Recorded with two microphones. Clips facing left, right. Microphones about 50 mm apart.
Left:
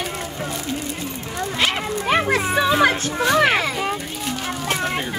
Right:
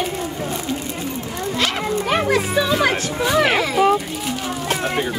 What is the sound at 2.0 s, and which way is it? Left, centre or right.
Music, left.